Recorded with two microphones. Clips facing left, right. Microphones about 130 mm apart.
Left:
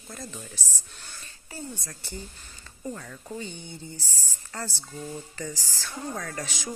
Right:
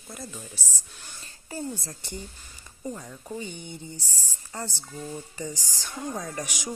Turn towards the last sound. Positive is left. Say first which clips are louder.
# right 1 dB
turn(degrees=-15)  # may be behind; listen again after turning